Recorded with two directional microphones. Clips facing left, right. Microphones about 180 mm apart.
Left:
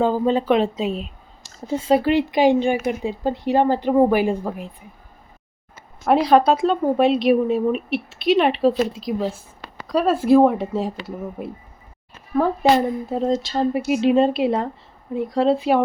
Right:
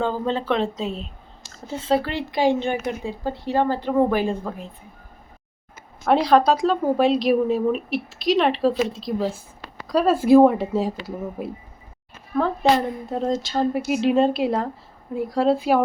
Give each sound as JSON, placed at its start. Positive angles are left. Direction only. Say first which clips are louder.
{"t": 0.0, "sound": "speech", "louder": "left 5 dB", "side_deg": 10}
{"t": 6.1, "sound": "a woman's voice", "louder": "left 2 dB", "side_deg": 5}
{"t": 12.4, "sound": "speech", "louder": "left 2 dB", "side_deg": 10}
{"t": 13.1, "sound": "a woman's voice", "louder": "left 1 dB", "side_deg": 0}